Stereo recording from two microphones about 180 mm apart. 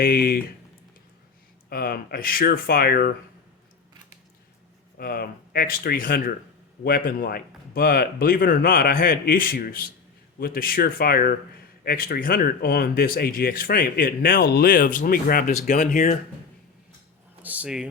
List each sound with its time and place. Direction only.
0.0 s speech: 55° left (ahead or behind)
1.7 s speech: 55° left (ahead or behind)
4.9 s speech: 55° left (ahead or behind)
17.4 s a sound: 10° right (ahead or behind)